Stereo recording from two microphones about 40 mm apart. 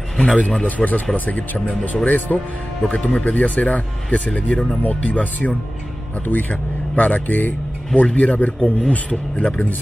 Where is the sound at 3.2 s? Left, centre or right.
Left.